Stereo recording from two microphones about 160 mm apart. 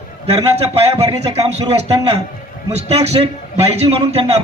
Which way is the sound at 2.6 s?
40° right (ahead or behind).